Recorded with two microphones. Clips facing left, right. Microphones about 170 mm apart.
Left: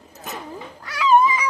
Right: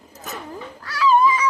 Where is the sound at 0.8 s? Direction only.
20° left (ahead or behind).